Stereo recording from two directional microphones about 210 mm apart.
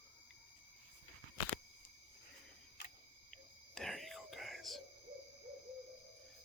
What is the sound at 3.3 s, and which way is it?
Whispering, centre (ahead or behind).